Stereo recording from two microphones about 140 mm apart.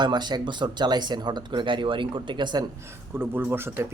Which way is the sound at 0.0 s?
30° right (ahead or behind).